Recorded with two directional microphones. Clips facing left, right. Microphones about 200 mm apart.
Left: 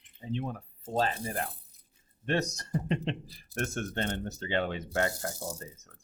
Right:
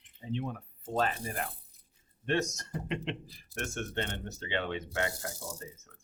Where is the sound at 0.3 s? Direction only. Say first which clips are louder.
Left 1 dB; 40° left (ahead or behind).